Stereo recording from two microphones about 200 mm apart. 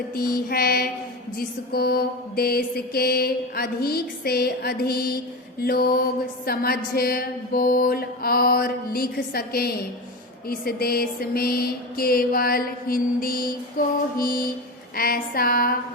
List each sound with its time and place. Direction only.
0.1 s music: 50° left (ahead or behind)